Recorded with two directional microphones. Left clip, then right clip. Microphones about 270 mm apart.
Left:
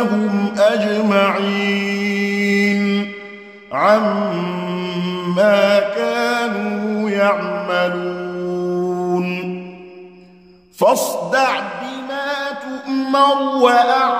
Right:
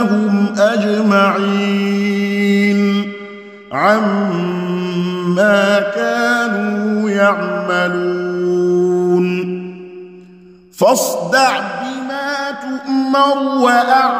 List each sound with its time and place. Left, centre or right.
0.0 s music: right
3.7 s mantra: right
8.5 s music: right
10.8 s music: right